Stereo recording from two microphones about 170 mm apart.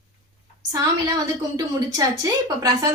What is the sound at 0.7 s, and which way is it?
Speech, 20° right (ahead or behind).